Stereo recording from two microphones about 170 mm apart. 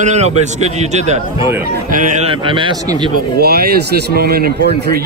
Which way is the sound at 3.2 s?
65° right (ahead or behind).